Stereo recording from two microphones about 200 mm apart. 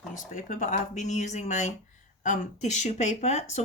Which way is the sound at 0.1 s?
40° left (ahead or behind).